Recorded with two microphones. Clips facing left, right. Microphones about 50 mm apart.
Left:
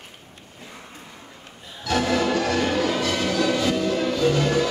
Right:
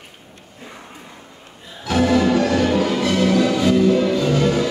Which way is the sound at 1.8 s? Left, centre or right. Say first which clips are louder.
Right 5 dB; centre.